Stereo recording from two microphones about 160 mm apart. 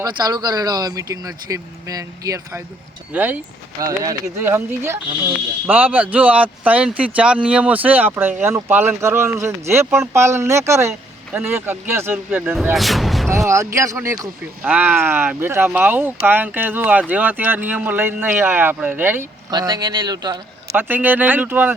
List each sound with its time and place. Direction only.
0.0 s speech: 25° right (ahead or behind)
3.1 s speech: 10° right (ahead or behind)
12.7 s speech: centre (ahead or behind)
13.3 s speech: 20° right (ahead or behind)
19.5 s speech: 25° right (ahead or behind)
20.7 s speech: 10° right (ahead or behind)